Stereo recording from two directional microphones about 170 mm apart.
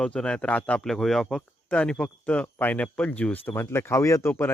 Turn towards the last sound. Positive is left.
turn(degrees=15)  # may be behind; listen again after turning